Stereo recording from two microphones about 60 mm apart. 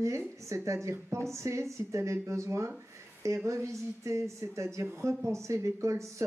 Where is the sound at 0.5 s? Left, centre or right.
Right.